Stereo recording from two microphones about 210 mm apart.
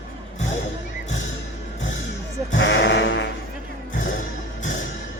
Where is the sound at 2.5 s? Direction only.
60° left (ahead or behind).